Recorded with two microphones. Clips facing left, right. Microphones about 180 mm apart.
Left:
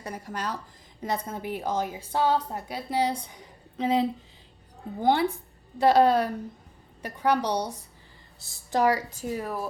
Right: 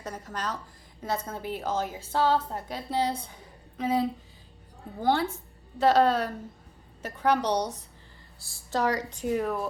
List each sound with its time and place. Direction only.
0.0 s a woman's voice: 10° left (ahead or behind)